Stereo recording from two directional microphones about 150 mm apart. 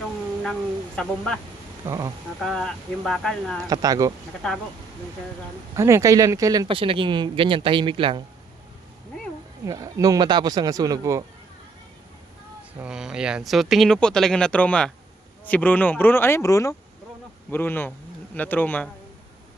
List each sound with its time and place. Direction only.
0.9 s speech: 5° left (ahead or behind)
1.9 s speech: 20° right (ahead or behind)
2.4 s speech: centre (ahead or behind)
3.7 s speech: 25° right (ahead or behind)
5.7 s speech: 20° right (ahead or behind)
9.6 s speech: 20° right (ahead or behind)
12.8 s speech: 5° right (ahead or behind); by 18.9 s 10° left (ahead or behind)